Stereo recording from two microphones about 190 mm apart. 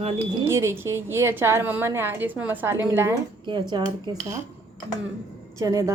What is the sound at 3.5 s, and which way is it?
Speech, 25° right (ahead or behind).